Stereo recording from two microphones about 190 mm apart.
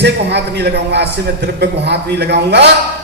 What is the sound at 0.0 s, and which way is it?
A man's voice, 60° right (ahead or behind).